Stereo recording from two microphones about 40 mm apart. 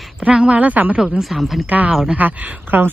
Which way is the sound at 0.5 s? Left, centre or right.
Right.